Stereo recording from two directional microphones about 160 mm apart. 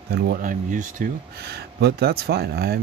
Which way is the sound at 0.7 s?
55° right (ahead or behind).